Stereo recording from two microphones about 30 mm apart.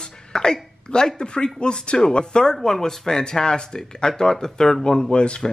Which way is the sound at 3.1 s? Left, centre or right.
Left.